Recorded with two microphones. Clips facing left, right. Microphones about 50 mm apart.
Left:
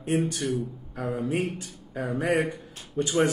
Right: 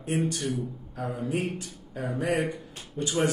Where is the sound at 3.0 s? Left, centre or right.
Left.